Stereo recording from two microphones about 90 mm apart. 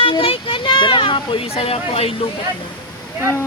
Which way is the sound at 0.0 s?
80° left.